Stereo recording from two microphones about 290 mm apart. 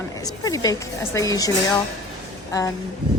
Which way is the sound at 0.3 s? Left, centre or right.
Centre.